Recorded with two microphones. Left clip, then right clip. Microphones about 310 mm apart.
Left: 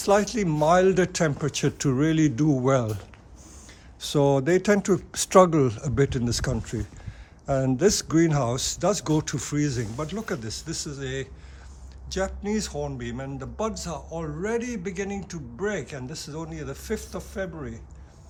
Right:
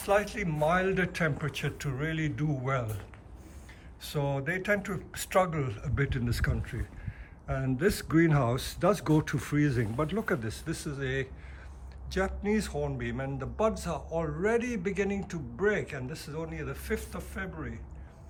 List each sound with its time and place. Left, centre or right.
0.0 s speech: centre
4.0 s speech: centre